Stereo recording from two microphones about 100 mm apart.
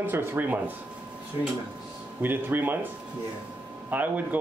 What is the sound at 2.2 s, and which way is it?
Speech, 20° right (ahead or behind).